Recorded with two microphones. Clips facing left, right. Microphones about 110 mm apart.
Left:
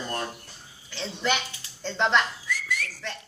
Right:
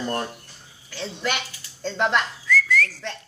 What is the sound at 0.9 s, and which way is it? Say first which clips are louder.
Speech: even; 5° right (ahead or behind).